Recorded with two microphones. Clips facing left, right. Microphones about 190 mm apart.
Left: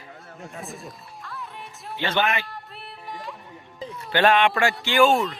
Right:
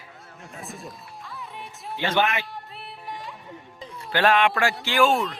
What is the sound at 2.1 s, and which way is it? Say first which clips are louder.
Speech: right 1 dB; centre (ahead or behind).